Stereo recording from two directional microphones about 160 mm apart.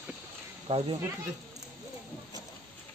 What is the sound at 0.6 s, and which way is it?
Speech, 35° right (ahead or behind).